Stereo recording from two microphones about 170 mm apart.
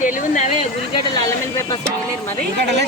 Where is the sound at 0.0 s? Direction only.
50° left (ahead or behind).